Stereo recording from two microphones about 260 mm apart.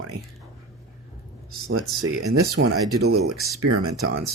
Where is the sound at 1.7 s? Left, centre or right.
Right.